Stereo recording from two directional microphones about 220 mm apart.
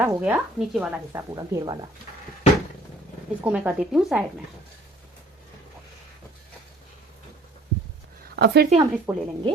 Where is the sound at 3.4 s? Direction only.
5° right (ahead or behind).